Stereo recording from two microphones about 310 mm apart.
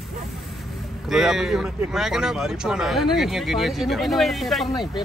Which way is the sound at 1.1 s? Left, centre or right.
Centre.